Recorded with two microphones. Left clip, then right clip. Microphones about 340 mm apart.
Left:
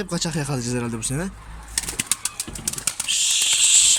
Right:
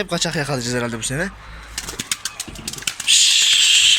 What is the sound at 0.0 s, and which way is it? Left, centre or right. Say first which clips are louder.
Speech: right 6 dB; centre.